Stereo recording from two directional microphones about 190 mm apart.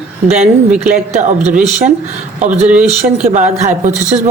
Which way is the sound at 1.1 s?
35° right (ahead or behind).